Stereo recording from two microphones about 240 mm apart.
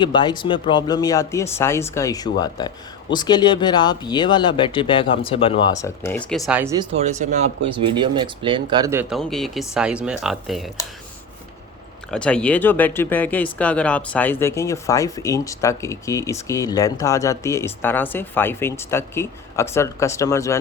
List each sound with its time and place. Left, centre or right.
0.0 s speech: centre
6.9 s speech: right; by 10.7 s centre
12.1 s speech: centre